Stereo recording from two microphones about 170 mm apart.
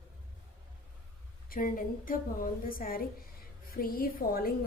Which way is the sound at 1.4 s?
55° left (ahead or behind).